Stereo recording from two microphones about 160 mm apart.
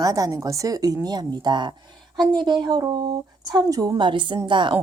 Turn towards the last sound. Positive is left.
turn(degrees=-30)  # may be behind; listen again after turning